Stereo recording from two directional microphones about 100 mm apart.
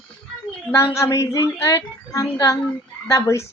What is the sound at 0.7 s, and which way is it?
Speech, 30° left (ahead or behind).